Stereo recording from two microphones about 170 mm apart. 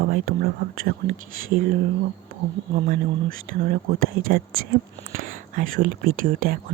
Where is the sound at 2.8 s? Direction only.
55° right (ahead or behind).